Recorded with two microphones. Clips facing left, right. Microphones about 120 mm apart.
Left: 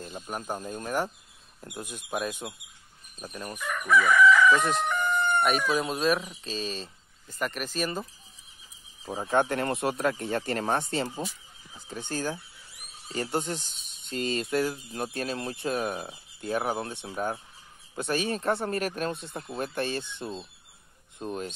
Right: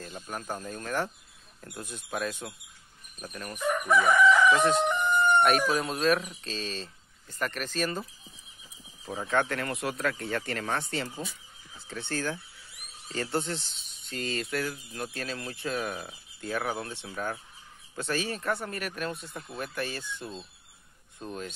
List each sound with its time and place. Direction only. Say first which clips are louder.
0.0 s speech: left 2 dB; 15° left (ahead or behind)
3.5 s chicken: even; 25° right (ahead or behind)
4.3 s chicken: left 1 dB; 15° right (ahead or behind)
5.8 s speech: even; 5° left (ahead or behind)
9.0 s speech: left 2 dB; 30° left (ahead or behind)
9.3 s speech: left 3 dB; 20° left (ahead or behind)
9.6 s speech: left 4 dB; 30° left (ahead or behind)